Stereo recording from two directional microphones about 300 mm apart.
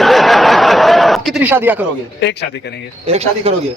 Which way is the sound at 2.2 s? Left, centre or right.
Left.